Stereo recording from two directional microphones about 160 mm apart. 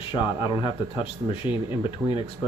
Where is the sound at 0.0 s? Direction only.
30° left (ahead or behind).